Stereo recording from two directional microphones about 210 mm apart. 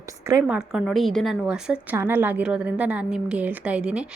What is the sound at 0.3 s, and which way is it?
A woman's voice, 10° right (ahead or behind).